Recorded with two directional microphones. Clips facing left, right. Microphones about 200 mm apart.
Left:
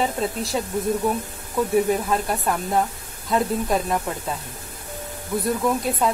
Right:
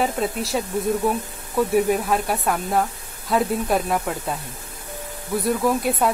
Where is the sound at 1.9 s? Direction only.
5° right (ahead or behind).